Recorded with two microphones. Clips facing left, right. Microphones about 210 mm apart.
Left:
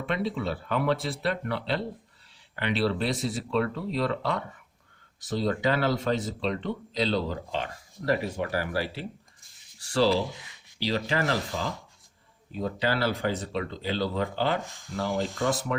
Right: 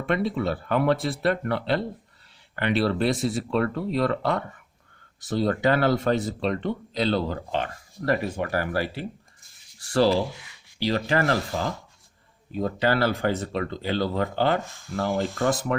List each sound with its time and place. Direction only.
0.0 s speech: 50° right (ahead or behind)
10.2 s speech: 20° left (ahead or behind)
10.8 s speech: 50° right (ahead or behind)
14.6 s speech: 15° left (ahead or behind)
14.9 s speech: 55° right (ahead or behind)